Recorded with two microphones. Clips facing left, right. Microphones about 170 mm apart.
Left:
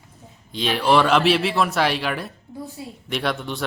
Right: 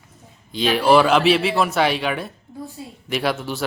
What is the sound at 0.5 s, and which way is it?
Speech, centre (ahead or behind).